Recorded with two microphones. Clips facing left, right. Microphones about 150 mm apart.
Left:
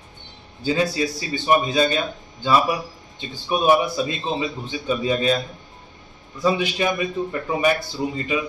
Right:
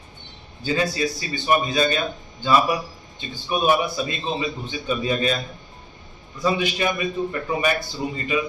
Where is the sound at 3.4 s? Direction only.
20° left (ahead or behind).